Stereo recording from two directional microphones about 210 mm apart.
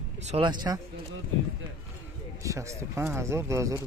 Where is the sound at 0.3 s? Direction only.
20° right (ahead or behind).